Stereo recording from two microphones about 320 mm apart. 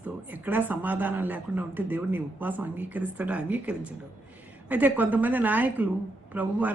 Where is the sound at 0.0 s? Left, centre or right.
Centre.